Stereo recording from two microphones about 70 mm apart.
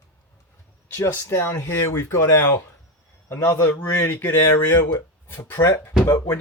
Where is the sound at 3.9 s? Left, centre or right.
Left.